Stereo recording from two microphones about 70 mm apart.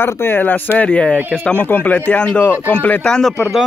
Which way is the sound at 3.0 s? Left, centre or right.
Centre.